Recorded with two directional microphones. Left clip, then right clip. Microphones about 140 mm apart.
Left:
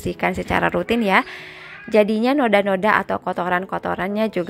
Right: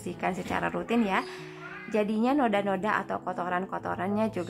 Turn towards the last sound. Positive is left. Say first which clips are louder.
# left 8 dB
turn(degrees=30)  # may be behind; listen again after turning